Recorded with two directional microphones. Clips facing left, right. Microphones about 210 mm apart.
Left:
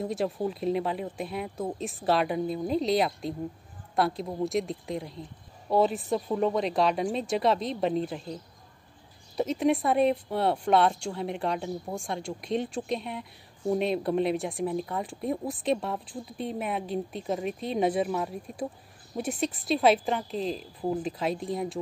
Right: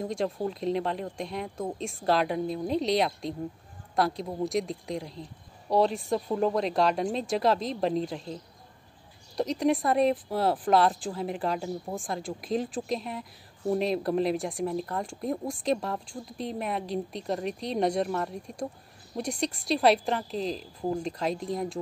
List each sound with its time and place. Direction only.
0.0 s speech: 5° left (ahead or behind)